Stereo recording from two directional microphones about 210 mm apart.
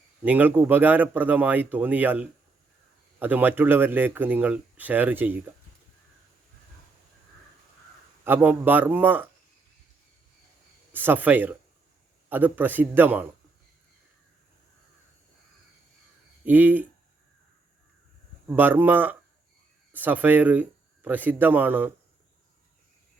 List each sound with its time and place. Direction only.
0.3 s speech: 10° right (ahead or behind)
8.2 s speech: 10° right (ahead or behind)
10.9 s speech: 10° right (ahead or behind)
16.5 s speech: 10° right (ahead or behind)
18.4 s speech: 10° right (ahead or behind)